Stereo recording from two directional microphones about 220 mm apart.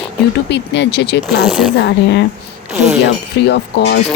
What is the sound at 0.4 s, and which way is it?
Speech, 50° left (ahead or behind).